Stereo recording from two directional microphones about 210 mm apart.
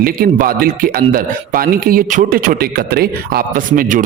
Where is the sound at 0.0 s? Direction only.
45° right (ahead or behind).